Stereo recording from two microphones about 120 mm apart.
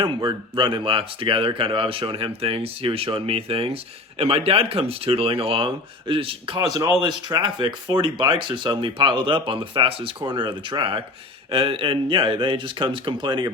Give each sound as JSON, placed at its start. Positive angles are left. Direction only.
{"t": 0.0, "sound": "speech", "side_deg": -40}